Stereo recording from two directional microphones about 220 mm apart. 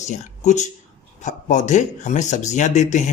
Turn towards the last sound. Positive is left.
turn(degrees=30)  # may be behind; listen again after turning